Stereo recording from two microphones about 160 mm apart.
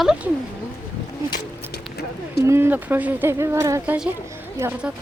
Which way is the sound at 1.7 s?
90° left.